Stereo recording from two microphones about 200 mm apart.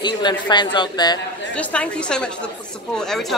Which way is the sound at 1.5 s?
5° left (ahead or behind).